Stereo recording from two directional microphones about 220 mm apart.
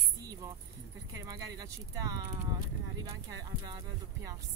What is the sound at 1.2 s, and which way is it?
Speech, 15° right (ahead or behind).